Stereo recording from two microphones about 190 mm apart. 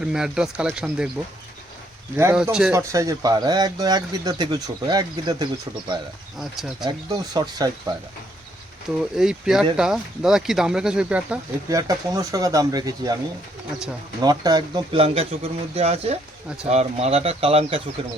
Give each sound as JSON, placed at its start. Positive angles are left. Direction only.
{"t": 0.0, "sound": "speech", "side_deg": -5}
{"t": 2.1, "sound": "speech", "side_deg": -10}
{"t": 2.7, "sound": "speech", "side_deg": -15}
{"t": 6.4, "sound": "speech", "side_deg": 0}
{"t": 6.8, "sound": "speech", "side_deg": -20}
{"t": 9.1, "sound": "speech", "side_deg": -5}
{"t": 11.7, "sound": "speech", "side_deg": -20}
{"t": 14.2, "sound": "speech", "side_deg": -20}